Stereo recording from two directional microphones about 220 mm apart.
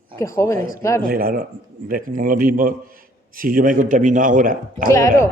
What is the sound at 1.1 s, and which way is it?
A man's voice, 40° right (ahead or behind).